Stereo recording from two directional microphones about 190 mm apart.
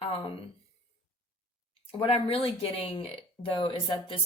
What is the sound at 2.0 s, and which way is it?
Speech, 30° left (ahead or behind).